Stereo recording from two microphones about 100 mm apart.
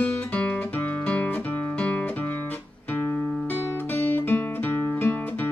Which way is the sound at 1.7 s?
15° left (ahead or behind).